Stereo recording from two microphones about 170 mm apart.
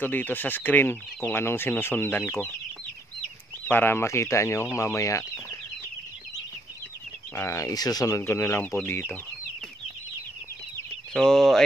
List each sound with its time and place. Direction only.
0.0 s speech: 10° left (ahead or behind)
3.6 s speech: 10° left (ahead or behind)
7.3 s speech: 15° left (ahead or behind)
11.1 s speech: 5° left (ahead or behind)